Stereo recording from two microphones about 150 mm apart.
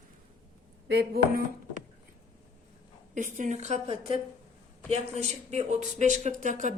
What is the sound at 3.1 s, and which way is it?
Speech, 60° right (ahead or behind).